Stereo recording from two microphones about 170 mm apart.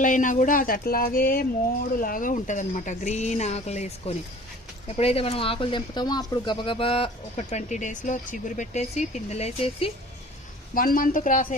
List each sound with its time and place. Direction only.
0.0 s speech: 50° left (ahead or behind)
10.8 s speech: 55° left (ahead or behind)